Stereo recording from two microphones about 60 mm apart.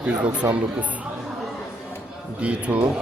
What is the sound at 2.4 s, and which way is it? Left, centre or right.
Speech, right.